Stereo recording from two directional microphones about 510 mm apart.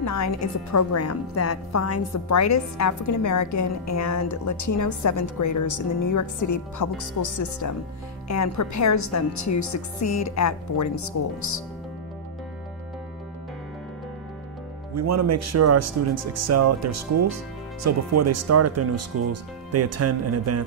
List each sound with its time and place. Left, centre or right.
0.0 s a woman's voice: left
15.0 s speech: right